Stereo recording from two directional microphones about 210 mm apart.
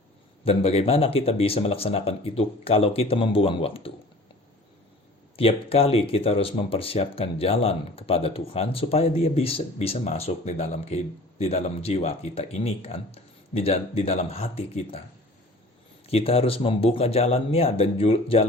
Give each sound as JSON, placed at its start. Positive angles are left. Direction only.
{"t": 0.4, "sound": "speech", "side_deg": 25}
{"t": 5.4, "sound": "speech", "side_deg": 25}
{"t": 16.0, "sound": "speech", "side_deg": 30}